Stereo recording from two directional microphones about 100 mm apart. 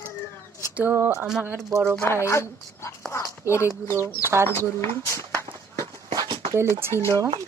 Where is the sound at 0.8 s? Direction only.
15° right (ahead or behind).